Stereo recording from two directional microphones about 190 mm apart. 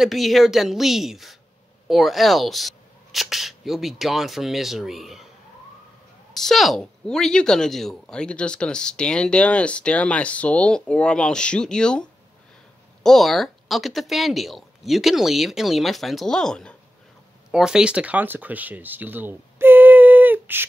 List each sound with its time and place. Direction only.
0.0 s a woman's voice: centre (ahead or behind)
6.3 s a woman's voice: centre (ahead or behind)